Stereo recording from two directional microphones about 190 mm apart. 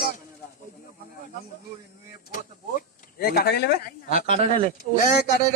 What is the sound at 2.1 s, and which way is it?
Speech, 45° left (ahead or behind).